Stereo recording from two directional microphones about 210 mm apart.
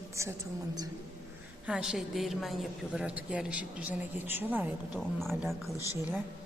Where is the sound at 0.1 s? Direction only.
15° right (ahead or behind).